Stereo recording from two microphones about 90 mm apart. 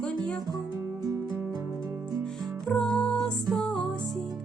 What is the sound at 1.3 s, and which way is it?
Music, 35° right (ahead or behind).